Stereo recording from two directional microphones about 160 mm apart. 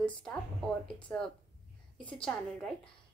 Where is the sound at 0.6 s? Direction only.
25° right (ahead or behind).